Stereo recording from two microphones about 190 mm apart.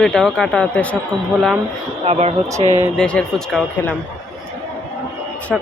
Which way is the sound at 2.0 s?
35° right (ahead or behind).